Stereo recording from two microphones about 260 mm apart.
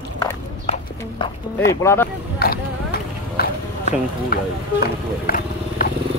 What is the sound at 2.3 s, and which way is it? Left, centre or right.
Clip-clop, left.